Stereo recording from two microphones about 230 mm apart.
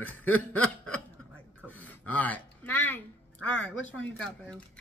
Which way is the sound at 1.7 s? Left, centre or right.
Centre.